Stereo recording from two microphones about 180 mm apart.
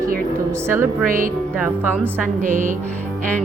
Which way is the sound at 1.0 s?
50° right (ahead or behind).